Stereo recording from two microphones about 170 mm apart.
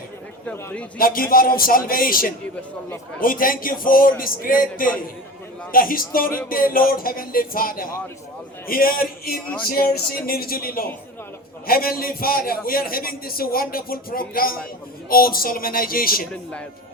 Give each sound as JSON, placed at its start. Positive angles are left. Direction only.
{"t": 0.4, "sound": "a man's voice", "side_deg": 10}
{"t": 0.9, "sound": "a man's voice", "side_deg": 55}
{"t": 16.3, "sound": "a man's voice", "side_deg": 5}